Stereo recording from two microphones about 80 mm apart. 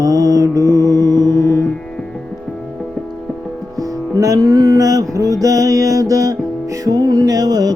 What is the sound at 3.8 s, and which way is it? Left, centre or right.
Music, right.